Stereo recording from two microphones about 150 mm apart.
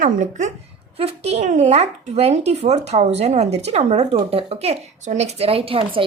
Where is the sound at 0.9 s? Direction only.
45° right (ahead or behind).